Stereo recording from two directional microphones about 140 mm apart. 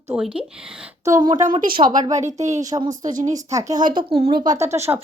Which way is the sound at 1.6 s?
90° right.